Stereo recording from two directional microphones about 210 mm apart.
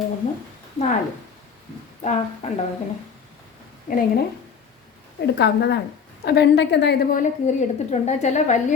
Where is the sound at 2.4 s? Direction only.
30° left (ahead or behind).